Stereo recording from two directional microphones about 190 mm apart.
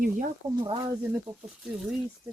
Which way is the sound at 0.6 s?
25° right (ahead or behind).